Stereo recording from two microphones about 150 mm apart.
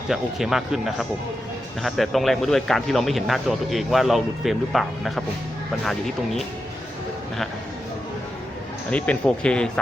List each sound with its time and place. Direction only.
0.1 s speech: centre (ahead or behind)
8.9 s speech: 10° left (ahead or behind)